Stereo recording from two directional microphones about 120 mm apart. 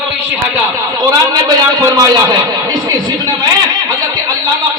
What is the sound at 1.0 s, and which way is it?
A man's voice, 30° right (ahead or behind).